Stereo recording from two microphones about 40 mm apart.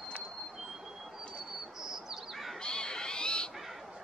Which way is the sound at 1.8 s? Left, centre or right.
Centre.